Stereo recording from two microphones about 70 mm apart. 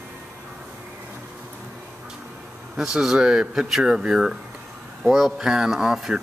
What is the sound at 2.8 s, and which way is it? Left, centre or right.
Speech, centre.